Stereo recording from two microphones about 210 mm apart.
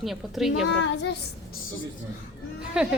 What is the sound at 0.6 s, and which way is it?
Child singing, 55° left (ahead or behind).